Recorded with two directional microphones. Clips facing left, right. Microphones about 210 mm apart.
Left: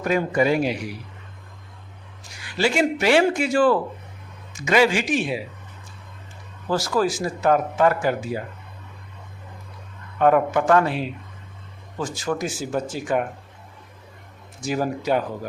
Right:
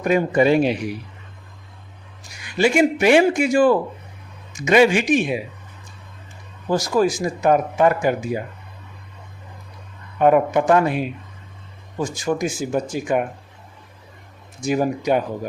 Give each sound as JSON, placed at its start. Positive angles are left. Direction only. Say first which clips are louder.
{"t": 0.0, "sound": "speech", "louder": "right 4 dB", "side_deg": -20}
{"t": 2.4, "sound": "speech", "louder": "right 4 dB", "side_deg": -15}
{"t": 6.7, "sound": "speech", "louder": "right 3 dB", "side_deg": -15}
{"t": 10.2, "sound": "speech", "louder": "right 2 dB", "side_deg": -15}
{"t": 14.6, "sound": "speech", "louder": "right 4 dB", "side_deg": -15}